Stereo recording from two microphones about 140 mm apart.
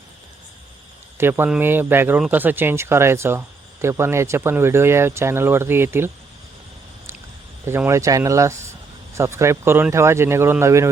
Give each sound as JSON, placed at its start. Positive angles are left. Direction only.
{"t": 1.2, "sound": "speech", "side_deg": -15}
{"t": 7.6, "sound": "speech", "side_deg": -15}